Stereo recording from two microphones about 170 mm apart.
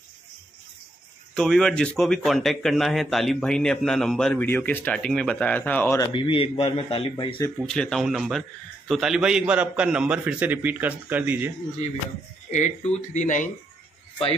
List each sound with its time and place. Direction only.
1.3 s speech: 5° left (ahead or behind)
6.1 s speech: 30° left (ahead or behind)
7.5 s speech: 5° left (ahead or behind)
12.4 s speech: 45° left (ahead or behind)